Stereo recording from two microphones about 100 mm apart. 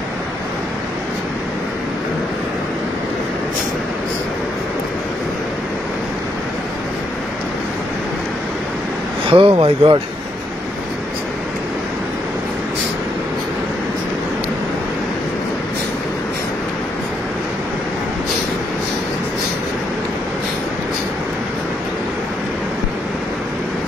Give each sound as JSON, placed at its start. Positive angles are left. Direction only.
{"t": 9.3, "sound": "speech", "side_deg": -65}